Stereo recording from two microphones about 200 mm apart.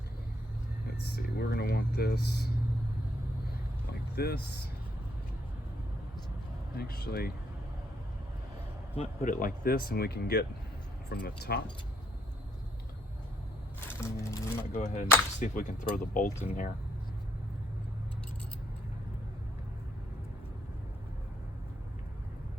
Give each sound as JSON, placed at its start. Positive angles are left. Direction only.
{"t": 1.0, "sound": "speech", "side_deg": 55}
{"t": 4.1, "sound": "speech", "side_deg": 55}
{"t": 6.7, "sound": "speech", "side_deg": 50}
{"t": 9.0, "sound": "speech", "side_deg": 45}
{"t": 13.8, "sound": "music", "side_deg": 15}
{"t": 14.7, "sound": "speech", "side_deg": 35}